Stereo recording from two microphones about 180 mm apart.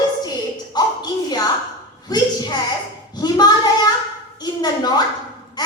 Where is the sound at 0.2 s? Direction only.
20° left (ahead or behind).